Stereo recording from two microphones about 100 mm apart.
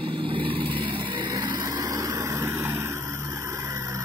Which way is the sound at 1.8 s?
35° right (ahead or behind).